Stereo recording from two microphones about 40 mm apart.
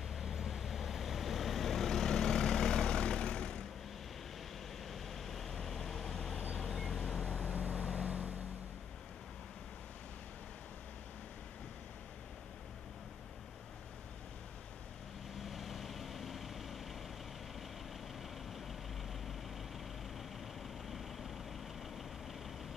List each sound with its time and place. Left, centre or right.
0.1 s vehicle: centre; by 3.6 s left
4.8 s vehicle: centre
7.4 s vehicle: right
15.4 s vehicle: centre
20.9 s vehicle: centre